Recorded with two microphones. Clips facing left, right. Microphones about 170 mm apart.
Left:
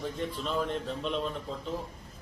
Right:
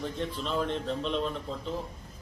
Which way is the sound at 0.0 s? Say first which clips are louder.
Even; centre (ahead or behind).